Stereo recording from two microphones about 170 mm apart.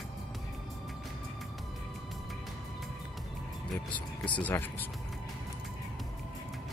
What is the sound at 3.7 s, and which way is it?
Speech, 10° left (ahead or behind).